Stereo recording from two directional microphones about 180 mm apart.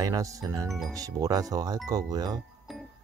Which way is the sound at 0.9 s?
20° right (ahead or behind).